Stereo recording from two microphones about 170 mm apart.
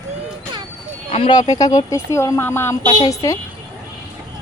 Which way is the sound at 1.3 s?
25° left (ahead or behind).